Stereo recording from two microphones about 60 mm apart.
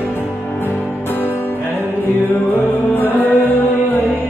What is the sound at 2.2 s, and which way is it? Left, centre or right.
Music, left.